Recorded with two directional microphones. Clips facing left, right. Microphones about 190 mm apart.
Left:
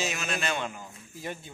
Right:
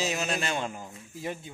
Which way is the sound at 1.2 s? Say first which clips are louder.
Right 2 dB; 20° right (ahead or behind).